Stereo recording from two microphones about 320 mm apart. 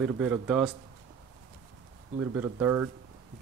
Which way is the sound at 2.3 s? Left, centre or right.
Centre.